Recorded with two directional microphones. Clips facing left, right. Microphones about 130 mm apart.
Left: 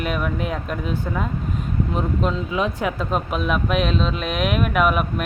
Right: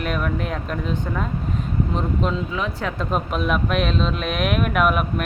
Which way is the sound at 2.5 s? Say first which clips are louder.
Left 3 dB; 15° left (ahead or behind).